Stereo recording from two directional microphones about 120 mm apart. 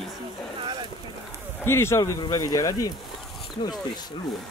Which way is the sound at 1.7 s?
20° left (ahead or behind).